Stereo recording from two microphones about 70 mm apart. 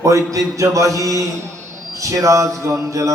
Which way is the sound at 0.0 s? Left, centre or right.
Right.